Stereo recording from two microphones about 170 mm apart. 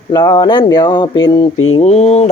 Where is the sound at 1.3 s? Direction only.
30° left (ahead or behind).